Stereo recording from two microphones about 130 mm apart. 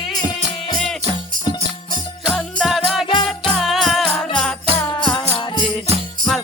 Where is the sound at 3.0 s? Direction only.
40° left (ahead or behind).